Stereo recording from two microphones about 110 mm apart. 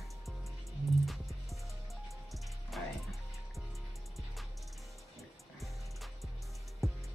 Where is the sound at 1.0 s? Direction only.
Centre (ahead or behind).